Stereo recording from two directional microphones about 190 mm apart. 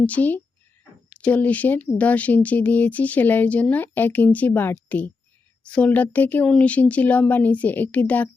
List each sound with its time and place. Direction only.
0.0 s speech: 10° left (ahead or behind)